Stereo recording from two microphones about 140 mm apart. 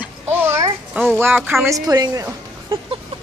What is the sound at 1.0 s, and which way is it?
Speech, 10° right (ahead or behind).